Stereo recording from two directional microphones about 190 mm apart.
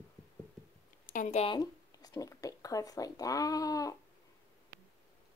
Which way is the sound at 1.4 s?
20° left (ahead or behind).